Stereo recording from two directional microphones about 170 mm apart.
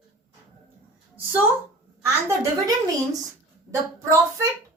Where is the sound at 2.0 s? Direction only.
15° right (ahead or behind).